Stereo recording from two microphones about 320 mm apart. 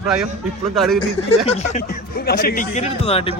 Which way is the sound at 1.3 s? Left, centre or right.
Centre.